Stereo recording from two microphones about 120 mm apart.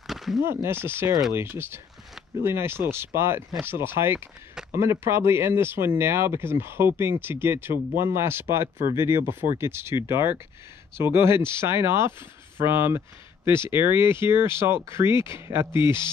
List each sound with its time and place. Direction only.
0.0 s a sound: centre (ahead or behind)
0.5 s speech: 20° right (ahead or behind)
15.7 s a man's voice: 40° left (ahead or behind)